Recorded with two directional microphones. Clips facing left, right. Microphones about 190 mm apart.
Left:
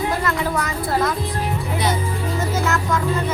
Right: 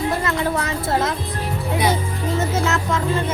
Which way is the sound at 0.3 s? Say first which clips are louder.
Right 1 dB; 25° right (ahead or behind).